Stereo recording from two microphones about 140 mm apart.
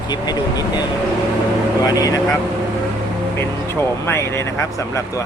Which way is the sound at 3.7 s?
20° left (ahead or behind).